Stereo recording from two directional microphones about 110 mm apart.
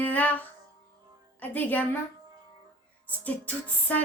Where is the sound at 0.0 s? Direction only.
15° left (ahead or behind).